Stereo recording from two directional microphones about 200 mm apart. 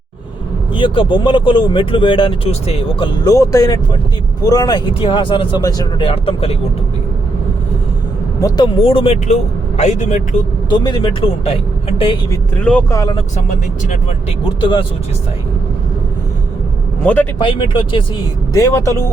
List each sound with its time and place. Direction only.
0.7 s speech: 25° left (ahead or behind)
8.4 s speech: 20° left (ahead or behind); by 10.2 s 35° left (ahead or behind)
10.7 s speech: 20° left (ahead or behind)
12.3 s speech: 5° left (ahead or behind)
13.1 s speech: 35° left (ahead or behind)
14.6 s speech: 25° left (ahead or behind)
17.0 s a man's voice: 10° left (ahead or behind)
17.3 s speech: 25° left (ahead or behind)